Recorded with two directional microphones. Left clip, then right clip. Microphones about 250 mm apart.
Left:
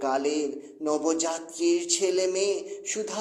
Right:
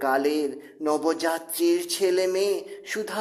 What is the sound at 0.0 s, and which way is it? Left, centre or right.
Speech, right.